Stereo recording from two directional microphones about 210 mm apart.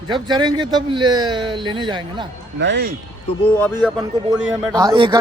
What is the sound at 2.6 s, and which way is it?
Speech, 55° right (ahead or behind).